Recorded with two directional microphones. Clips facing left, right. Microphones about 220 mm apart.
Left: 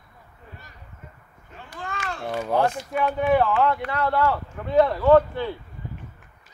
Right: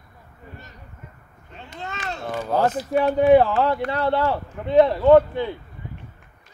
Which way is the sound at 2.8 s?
35° right (ahead or behind).